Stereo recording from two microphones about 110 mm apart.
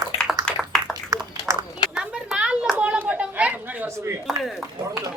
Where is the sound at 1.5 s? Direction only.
25° right (ahead or behind).